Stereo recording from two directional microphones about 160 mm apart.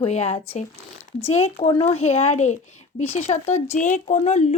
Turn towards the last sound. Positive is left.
turn(degrees=45)  # may be behind; listen again after turning